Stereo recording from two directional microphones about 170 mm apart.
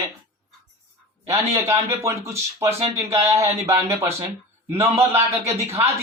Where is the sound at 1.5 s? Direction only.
15° right (ahead or behind).